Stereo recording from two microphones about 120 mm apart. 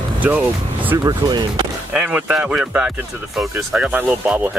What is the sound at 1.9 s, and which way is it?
Speech, 10° right (ahead or behind).